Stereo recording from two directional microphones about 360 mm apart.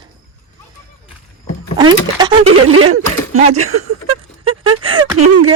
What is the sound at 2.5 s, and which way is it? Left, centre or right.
Speech, right.